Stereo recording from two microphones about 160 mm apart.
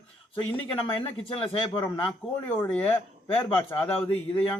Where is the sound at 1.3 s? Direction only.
35° left (ahead or behind).